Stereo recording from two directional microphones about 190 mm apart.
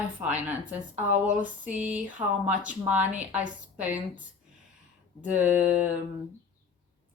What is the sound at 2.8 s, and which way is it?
Speech, 10° right (ahead or behind).